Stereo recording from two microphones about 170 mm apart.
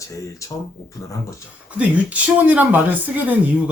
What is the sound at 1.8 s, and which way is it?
Speech, 10° right (ahead or behind).